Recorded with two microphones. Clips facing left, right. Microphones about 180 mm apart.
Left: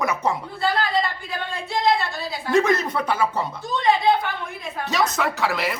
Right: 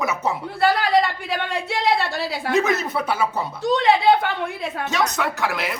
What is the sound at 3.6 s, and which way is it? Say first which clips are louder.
Speech: right 3 dB; 75° right (ahead or behind).